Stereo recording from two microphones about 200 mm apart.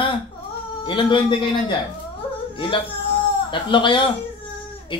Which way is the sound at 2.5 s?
25° left (ahead or behind).